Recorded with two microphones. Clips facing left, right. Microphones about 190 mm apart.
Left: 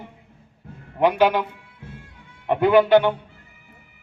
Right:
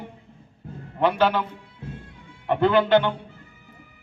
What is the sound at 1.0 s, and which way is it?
Speech, 15° left (ahead or behind).